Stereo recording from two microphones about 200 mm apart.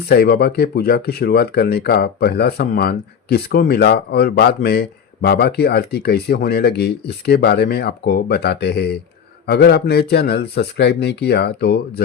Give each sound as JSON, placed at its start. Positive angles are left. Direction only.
{"t": 0.1, "sound": "speech", "side_deg": 50}